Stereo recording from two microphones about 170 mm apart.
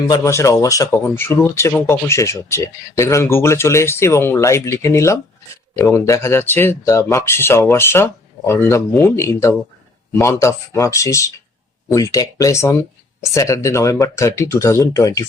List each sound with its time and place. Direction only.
0.1 s speech: 15° left (ahead or behind)